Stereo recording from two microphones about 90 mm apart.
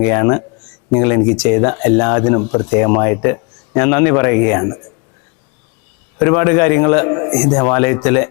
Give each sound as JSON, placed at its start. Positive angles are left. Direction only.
{"t": 0.0, "sound": "a man's voice", "side_deg": 20}
{"t": 6.2, "sound": "a man's voice", "side_deg": 20}
{"t": 7.3, "sound": "speech", "side_deg": 10}
{"t": 7.7, "sound": "speech", "side_deg": 20}